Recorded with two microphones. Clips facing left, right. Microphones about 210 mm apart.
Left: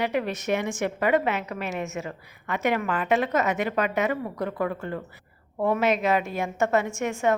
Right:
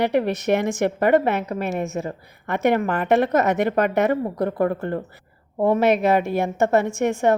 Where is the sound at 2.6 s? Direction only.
60° right (ahead or behind).